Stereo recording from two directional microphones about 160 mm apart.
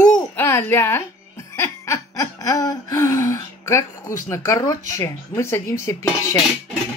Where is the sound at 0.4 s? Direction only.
15° left (ahead or behind).